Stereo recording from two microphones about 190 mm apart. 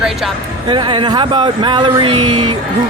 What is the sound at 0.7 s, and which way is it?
Speech, 25° right (ahead or behind).